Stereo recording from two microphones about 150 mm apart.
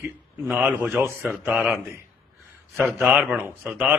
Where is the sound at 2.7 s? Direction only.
Centre (ahead or behind).